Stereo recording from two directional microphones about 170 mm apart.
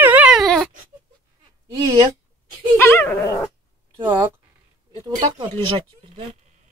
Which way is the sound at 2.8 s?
10° left (ahead or behind).